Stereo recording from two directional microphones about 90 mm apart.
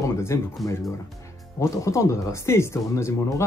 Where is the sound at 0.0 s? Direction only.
30° left (ahead or behind).